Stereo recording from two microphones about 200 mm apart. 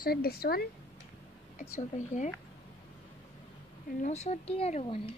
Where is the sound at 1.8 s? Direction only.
35° left (ahead or behind).